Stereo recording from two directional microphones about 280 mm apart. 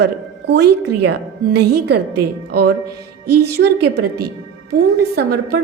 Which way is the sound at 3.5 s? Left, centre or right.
Right.